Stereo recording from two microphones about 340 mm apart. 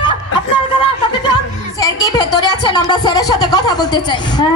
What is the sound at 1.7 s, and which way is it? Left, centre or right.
Speech, centre.